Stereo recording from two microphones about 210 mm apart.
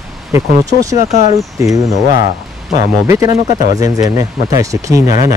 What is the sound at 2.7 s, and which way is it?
Speech, 15° right (ahead or behind).